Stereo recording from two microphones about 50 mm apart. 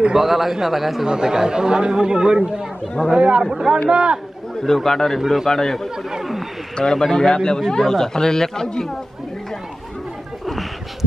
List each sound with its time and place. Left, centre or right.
0.2 s a man's voice: centre; by 4.2 s right
4.6 s a man's voice: centre
6.0 s a man's voice: centre
6.8 s speech: centre
10.4 s a sound: centre